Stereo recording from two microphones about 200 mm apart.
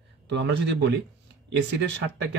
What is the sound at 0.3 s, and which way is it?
Speech, 60° right (ahead or behind).